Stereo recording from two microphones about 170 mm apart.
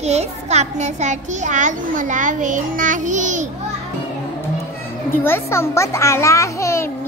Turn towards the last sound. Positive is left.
turn(degrees=15)  # may be behind; listen again after turning